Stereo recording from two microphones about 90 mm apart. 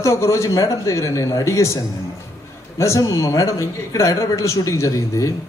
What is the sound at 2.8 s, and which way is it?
A man's voice, 35° left (ahead or behind).